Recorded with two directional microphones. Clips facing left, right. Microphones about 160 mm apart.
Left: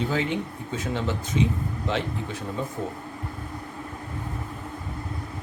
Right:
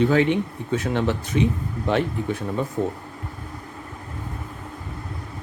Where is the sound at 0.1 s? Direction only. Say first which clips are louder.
Right 7 dB; 65° right (ahead or behind).